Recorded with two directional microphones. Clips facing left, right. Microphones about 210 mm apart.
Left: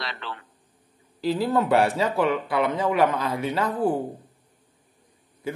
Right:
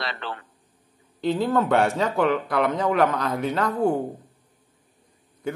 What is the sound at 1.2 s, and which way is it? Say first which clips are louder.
Speech: right 1 dB; 5° left (ahead or behind).